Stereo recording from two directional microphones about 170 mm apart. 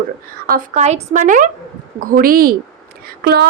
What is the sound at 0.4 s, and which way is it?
A woman's voice, 55° right (ahead or behind).